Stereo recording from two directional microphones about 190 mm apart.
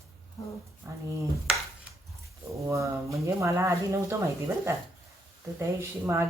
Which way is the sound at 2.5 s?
15° right (ahead or behind).